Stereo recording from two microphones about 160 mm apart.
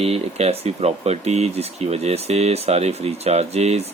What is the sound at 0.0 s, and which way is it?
Speech, 40° right (ahead or behind).